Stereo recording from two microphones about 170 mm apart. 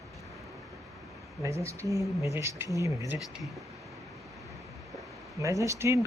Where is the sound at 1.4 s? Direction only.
15° right (ahead or behind).